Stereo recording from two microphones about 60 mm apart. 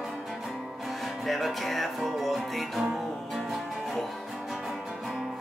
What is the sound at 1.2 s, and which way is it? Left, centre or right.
Music, centre.